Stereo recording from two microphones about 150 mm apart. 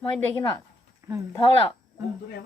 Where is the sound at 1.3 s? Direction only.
35° left (ahead or behind).